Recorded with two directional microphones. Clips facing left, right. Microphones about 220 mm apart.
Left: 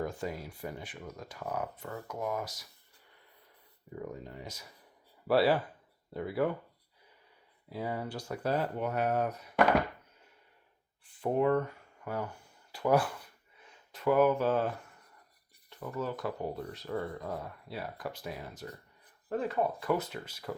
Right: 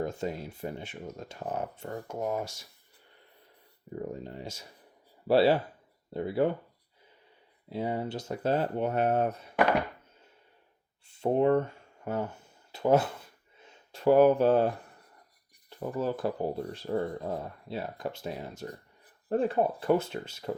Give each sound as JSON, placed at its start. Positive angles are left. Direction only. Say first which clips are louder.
{"t": 0.0, "sound": "speech", "louder": "right 3 dB", "side_deg": -25}
{"t": 3.9, "sound": "speech", "louder": "right 4 dB", "side_deg": -30}
{"t": 7.7, "sound": "speech", "louder": "right 4 dB", "side_deg": -25}
{"t": 11.0, "sound": "a sound", "louder": "right 4 dB", "side_deg": -25}
{"t": 15.7, "sound": "speech", "louder": "right 5 dB", "side_deg": -30}